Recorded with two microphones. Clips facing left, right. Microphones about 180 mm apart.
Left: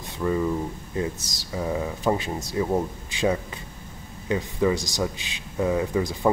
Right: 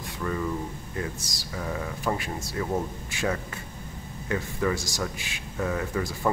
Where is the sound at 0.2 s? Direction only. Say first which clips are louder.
Left 6 dB; 20° left (ahead or behind).